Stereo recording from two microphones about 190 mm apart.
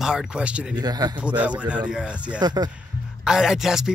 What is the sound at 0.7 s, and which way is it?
Speech, 20° right (ahead or behind).